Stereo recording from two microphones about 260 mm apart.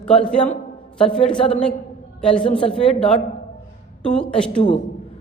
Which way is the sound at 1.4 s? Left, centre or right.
Left.